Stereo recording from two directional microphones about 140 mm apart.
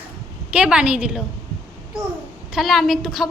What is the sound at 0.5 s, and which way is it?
Speech, 5° right (ahead or behind).